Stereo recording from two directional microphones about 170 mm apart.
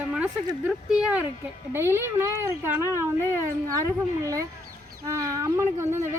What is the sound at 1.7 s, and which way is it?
Speech, 15° right (ahead or behind).